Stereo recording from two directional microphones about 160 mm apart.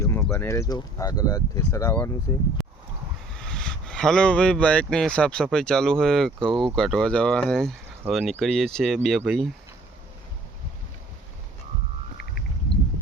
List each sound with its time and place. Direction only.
0.0 s speech: 15° left (ahead or behind)
3.3 s speech: 5° left (ahead or behind)